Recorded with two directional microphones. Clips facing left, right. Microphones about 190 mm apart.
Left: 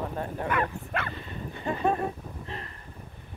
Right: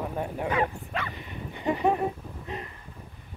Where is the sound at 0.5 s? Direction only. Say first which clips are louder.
Right 1 dB; 55° left (ahead or behind).